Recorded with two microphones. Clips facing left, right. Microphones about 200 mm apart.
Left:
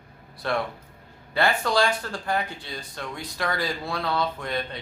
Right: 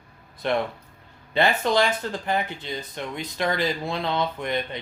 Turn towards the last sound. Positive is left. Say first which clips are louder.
# right 2 dB
turn(degrees=-20)  # may be behind; listen again after turning